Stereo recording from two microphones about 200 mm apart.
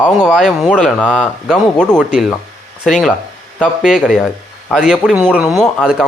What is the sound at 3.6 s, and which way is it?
Speech, centre (ahead or behind).